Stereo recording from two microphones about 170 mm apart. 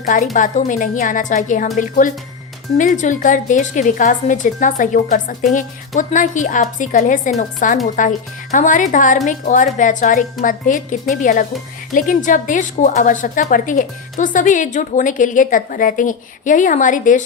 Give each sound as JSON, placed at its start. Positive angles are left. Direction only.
{"t": 0.0, "sound": "a woman's voice", "side_deg": 50}